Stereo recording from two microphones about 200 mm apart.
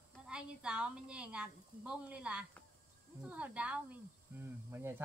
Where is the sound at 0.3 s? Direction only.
5° right (ahead or behind).